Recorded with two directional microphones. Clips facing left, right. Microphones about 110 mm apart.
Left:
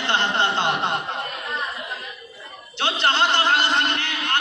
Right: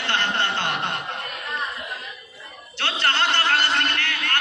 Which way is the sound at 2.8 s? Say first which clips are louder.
Left 3 dB; 15° left (ahead or behind).